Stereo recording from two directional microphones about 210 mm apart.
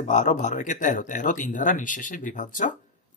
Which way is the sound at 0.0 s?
35° left (ahead or behind).